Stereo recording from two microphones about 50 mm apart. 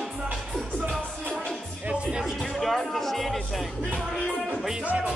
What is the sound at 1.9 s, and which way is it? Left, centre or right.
Music, right.